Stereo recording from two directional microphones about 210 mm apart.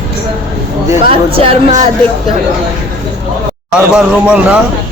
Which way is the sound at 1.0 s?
25° right (ahead or behind).